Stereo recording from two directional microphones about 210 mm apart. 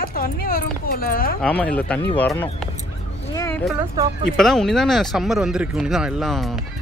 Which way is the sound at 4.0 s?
15° right (ahead or behind).